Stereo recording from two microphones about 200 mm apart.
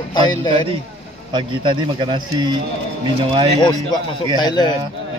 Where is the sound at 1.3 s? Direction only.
25° right (ahead or behind).